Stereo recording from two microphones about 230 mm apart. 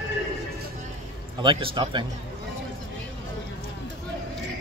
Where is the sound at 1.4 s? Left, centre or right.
Right.